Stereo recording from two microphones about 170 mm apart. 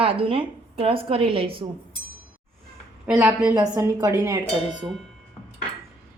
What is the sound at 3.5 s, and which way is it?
Speech, 20° right (ahead or behind).